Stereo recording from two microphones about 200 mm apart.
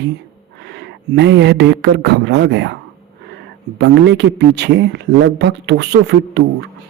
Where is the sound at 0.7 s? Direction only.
60° right (ahead or behind).